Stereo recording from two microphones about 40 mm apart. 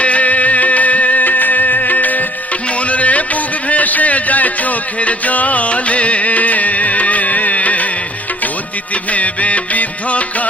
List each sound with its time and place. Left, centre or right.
0.0 s music: left
2.7 s a sound: left
9.0 s music: left